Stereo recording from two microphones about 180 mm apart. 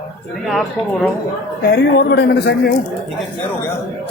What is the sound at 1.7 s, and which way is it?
Speech, 65° left (ahead or behind).